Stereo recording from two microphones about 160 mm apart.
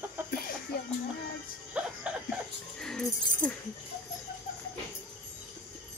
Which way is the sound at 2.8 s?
5° left (ahead or behind).